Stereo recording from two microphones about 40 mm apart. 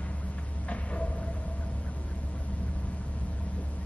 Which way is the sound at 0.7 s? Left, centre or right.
Left.